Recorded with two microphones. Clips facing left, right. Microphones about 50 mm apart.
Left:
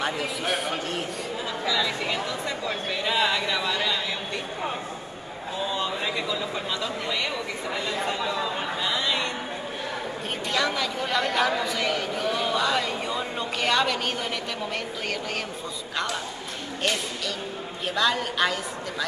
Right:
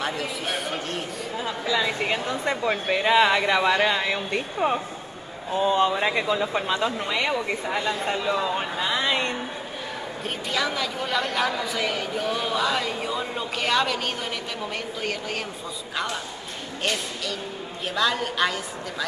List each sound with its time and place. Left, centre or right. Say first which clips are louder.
0.0 s a man's voice: left 1 dB; centre
1.7 s speech: right 2 dB; right
5.7 s speech: right 8 dB; right; by 9.0 s centre
9.0 s a sound: right 2 dB; right
10.5 s speech: left 1 dB; centre
17.8 s speech: even; centre